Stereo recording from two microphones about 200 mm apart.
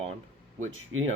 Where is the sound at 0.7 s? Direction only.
85° right.